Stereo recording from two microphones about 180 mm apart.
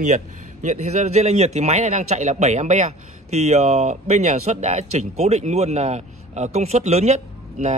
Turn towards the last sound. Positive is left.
turn(degrees=-40)  # may be behind; listen again after turning